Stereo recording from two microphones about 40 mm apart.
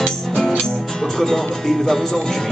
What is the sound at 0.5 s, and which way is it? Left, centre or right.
Music, centre.